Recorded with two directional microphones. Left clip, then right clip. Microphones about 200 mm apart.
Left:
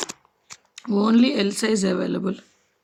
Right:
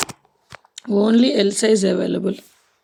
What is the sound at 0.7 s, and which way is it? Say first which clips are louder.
Speech: right 3 dB; centre (ahead or behind).